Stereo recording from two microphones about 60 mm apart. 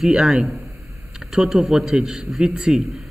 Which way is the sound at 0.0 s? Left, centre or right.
Centre.